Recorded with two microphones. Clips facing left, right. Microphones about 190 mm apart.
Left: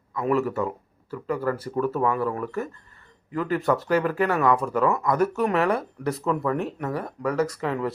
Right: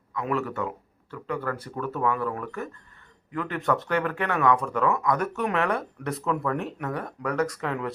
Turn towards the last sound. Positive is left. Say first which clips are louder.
# left 2 dB
turn(degrees=0)  # may be behind; listen again after turning